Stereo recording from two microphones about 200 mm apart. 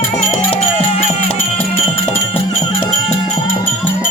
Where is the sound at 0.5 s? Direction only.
30° left (ahead or behind).